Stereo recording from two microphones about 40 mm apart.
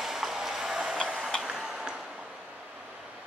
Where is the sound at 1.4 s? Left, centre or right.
Centre.